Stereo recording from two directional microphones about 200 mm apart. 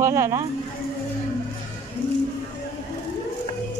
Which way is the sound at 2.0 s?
25° left (ahead or behind).